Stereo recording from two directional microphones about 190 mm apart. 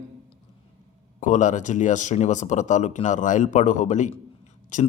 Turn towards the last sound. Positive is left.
turn(degrees=40)  # may be behind; listen again after turning